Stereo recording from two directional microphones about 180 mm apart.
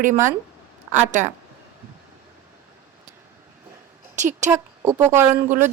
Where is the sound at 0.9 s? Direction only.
40° right (ahead or behind).